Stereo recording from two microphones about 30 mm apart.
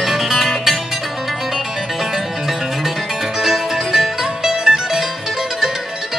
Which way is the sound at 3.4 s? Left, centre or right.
Centre.